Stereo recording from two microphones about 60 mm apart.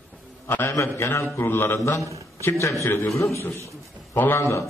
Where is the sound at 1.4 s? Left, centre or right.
Left.